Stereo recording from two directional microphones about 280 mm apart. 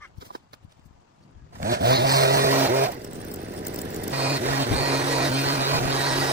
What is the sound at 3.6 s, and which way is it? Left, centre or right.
Vehicle, right.